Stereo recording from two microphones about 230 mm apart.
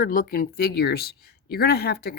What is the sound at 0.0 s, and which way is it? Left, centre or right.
Speech, left.